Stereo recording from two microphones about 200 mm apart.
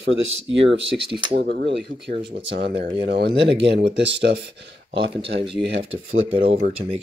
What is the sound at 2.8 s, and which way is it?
Speech, 25° right (ahead or behind).